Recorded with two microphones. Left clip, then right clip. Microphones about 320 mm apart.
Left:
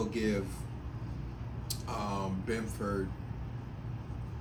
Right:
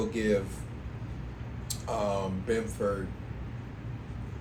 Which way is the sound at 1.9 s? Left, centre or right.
Centre.